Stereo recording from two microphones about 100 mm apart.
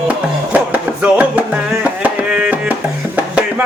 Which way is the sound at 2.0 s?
15° right (ahead or behind).